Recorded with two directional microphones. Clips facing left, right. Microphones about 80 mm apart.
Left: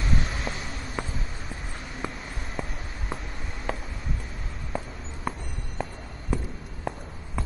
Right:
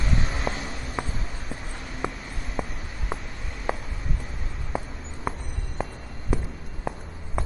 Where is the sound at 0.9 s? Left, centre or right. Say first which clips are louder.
Right 2 dB; centre.